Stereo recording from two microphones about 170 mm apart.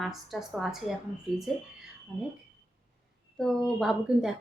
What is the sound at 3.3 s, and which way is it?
Speech, centre (ahead or behind).